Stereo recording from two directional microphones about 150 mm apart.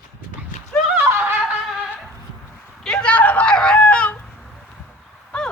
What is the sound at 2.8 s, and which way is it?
Speech, 5° left (ahead or behind).